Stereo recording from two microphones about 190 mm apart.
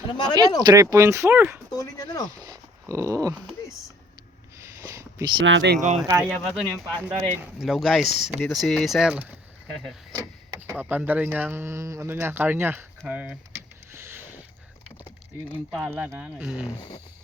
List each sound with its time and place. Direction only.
0.1 s speech: 20° left (ahead or behind)
0.6 s speech: 20° right (ahead or behind)
1.7 s speech: 20° left (ahead or behind)
2.9 s speech: 15° right (ahead or behind)
4.5 s a sound: 15° right (ahead or behind)
5.4 s speech: 75° right (ahead or behind)
6.1 s speech: 15° right (ahead or behind)
6.4 s speech: centre (ahead or behind)
10.1 s speech: 20° right (ahead or behind)
13.9 s a sound: 10° right (ahead or behind)
15.5 s speech: 10° right (ahead or behind)